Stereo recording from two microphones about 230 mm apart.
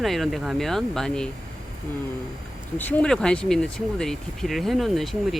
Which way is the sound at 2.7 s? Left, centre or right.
Centre.